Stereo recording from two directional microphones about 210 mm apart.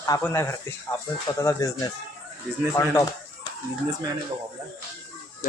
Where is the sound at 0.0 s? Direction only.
15° left (ahead or behind).